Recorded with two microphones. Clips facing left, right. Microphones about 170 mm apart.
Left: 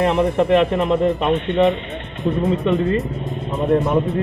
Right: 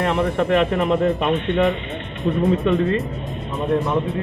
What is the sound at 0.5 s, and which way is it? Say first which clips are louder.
Speech: left 2 dB; centre (ahead or behind).